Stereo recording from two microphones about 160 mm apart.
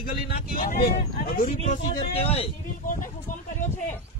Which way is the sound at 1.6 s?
40° left (ahead or behind).